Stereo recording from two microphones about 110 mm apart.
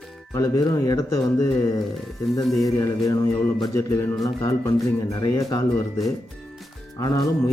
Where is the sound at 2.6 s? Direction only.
30° left (ahead or behind).